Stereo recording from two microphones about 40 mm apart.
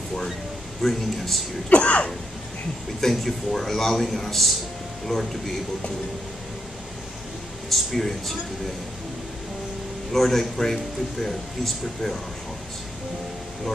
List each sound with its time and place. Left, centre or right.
0.8 s speech: centre
1.7 s speech: left
3.0 s a man's voice: centre
7.7 s speech: centre
10.1 s a man's voice: centre